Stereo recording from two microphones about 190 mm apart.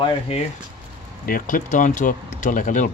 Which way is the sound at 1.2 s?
45° left (ahead or behind).